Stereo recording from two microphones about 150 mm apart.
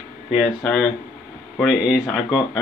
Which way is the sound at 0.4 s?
5° left (ahead or behind).